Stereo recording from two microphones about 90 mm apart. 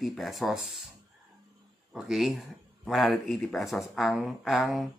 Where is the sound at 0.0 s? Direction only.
Centre (ahead or behind).